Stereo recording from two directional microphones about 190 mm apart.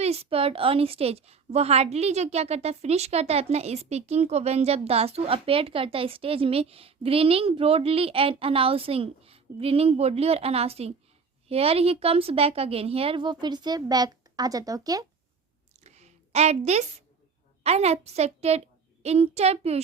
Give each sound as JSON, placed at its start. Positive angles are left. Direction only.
{"t": 0.0, "sound": "a woman's voice", "side_deg": -30}
{"t": 15.8, "sound": "a sound", "side_deg": -35}
{"t": 17.6, "sound": "a woman's voice", "side_deg": -35}